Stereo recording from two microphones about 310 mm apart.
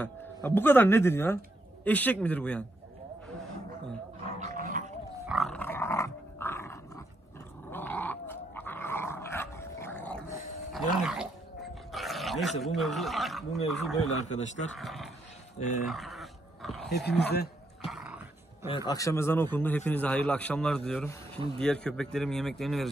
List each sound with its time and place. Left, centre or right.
0.0 s a man's voice: centre
4.4 s dog: right
5.2 s dog: centre
12.6 s a man's voice: centre
14.0 s speech: left
14.8 s a man's voice: centre
15.9 s dog: centre
16.9 s speech: left
17.8 s dog: centre
18.9 s a man's voice: centre